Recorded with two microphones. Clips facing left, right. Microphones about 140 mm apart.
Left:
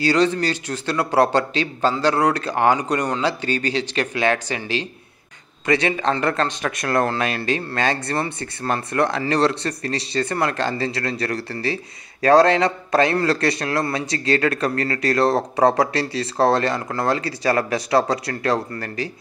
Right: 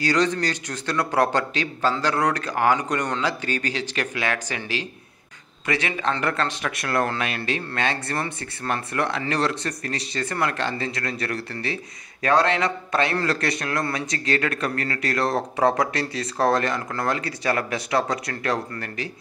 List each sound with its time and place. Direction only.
0.0 s a man's voice: 30° left (ahead or behind)